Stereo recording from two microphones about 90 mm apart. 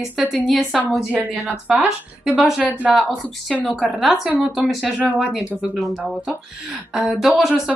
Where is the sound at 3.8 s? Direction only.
5° right (ahead or behind).